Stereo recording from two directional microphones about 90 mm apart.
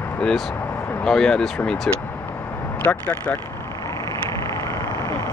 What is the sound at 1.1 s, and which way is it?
Speech, 5° left (ahead or behind).